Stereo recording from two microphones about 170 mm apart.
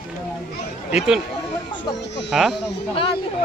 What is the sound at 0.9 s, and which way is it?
Speech, 5° right (ahead or behind).